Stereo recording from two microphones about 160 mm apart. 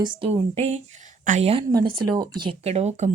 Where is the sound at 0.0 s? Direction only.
30° right (ahead or behind).